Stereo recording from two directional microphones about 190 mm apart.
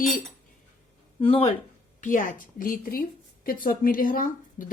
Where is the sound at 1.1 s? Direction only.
30° left (ahead or behind).